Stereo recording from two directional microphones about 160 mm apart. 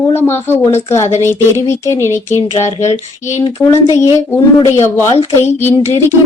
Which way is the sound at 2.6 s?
45° left (ahead or behind).